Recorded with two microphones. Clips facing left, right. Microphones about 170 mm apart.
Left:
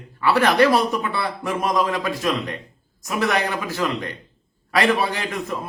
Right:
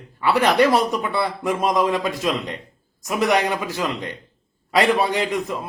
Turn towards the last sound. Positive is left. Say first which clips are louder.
# right 4 dB
turn(degrees=-20)  # may be behind; listen again after turning